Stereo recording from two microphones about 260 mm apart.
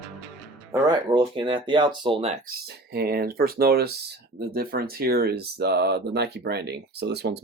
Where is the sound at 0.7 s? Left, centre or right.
Centre.